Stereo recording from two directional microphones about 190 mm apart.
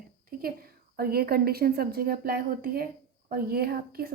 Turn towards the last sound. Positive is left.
turn(degrees=-50)  # may be behind; listen again after turning